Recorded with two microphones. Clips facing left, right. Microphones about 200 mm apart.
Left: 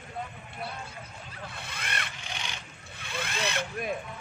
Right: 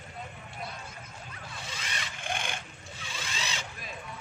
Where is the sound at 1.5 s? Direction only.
60° left (ahead or behind).